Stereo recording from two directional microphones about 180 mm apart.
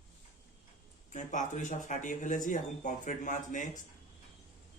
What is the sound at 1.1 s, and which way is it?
Speech, 45° left (ahead or behind).